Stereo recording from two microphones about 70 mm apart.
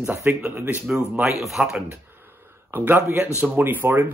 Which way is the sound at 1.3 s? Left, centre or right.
Centre.